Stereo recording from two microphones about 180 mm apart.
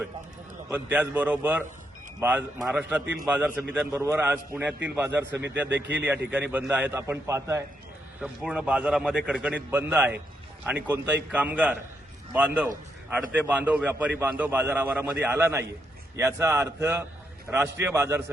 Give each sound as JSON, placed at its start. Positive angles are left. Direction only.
{"t": 0.7, "sound": "a man's voice", "side_deg": -10}
{"t": 8.2, "sound": "a man's voice", "side_deg": -5}